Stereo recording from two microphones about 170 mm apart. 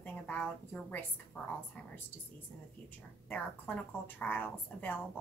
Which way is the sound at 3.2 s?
10° left (ahead or behind).